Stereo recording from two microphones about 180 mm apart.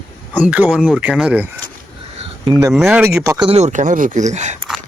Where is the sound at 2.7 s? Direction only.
Centre (ahead or behind).